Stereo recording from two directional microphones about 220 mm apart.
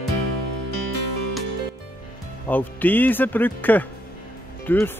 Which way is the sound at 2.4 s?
10° left (ahead or behind).